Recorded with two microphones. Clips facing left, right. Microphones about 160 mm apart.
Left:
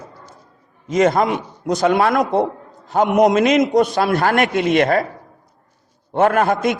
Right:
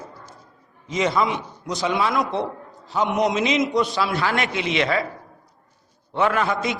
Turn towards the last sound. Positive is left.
turn(degrees=50)  # may be behind; listen again after turning